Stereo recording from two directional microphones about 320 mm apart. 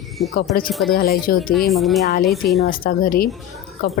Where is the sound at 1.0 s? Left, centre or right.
Left.